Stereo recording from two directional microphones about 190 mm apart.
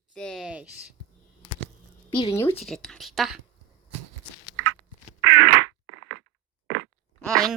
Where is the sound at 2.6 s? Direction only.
Centre (ahead or behind).